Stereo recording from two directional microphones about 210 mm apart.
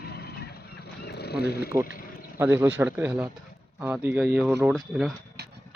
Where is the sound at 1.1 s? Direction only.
50° left (ahead or behind).